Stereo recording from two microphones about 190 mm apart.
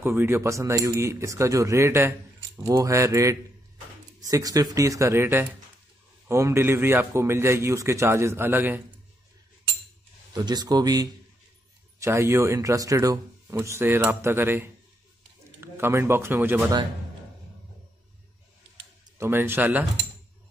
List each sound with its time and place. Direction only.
0.0 s speech: 10° right (ahead or behind)
10.3 s speech: 20° right (ahead or behind)
19.1 s speech: 10° right (ahead or behind)